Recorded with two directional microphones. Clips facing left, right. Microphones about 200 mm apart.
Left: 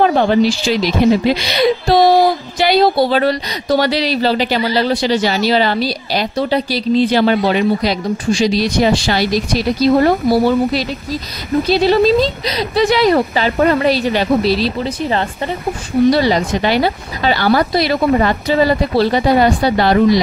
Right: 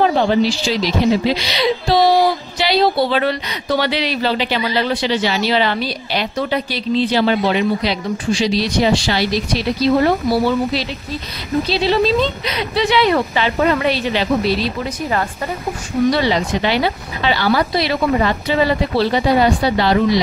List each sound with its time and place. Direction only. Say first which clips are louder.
0.0 s speech: left 2 dB; 55° left (ahead or behind); by 7.1 s 35° left (ahead or behind)
7.1 s a woman's voice: left 3 dB; 50° left (ahead or behind); by 15.2 s 30° left (ahead or behind)
16.1 s a woman's voice: left 2 dB; 40° left (ahead or behind)